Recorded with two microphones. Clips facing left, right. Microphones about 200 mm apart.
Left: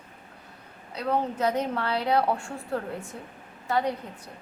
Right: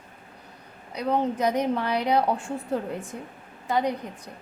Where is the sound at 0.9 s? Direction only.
15° right (ahead or behind).